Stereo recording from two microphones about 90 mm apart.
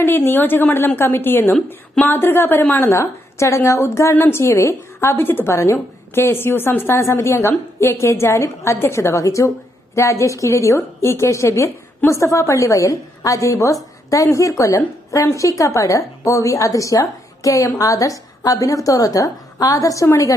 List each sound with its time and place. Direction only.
0.0 s a woman's voice: 25° left (ahead or behind)